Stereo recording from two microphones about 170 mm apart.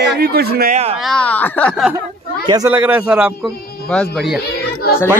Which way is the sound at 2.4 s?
20° right (ahead or behind).